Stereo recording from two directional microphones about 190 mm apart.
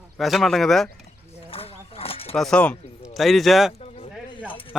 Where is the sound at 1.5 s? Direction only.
30° left (ahead or behind).